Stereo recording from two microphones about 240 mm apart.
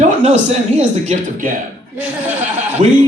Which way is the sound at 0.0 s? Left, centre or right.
Right.